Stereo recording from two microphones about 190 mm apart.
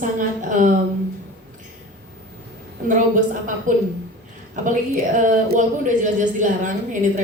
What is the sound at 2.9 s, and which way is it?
A woman's voice, 45° right (ahead or behind).